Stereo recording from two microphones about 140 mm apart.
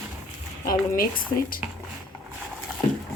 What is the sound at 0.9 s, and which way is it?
Speech, 90° left.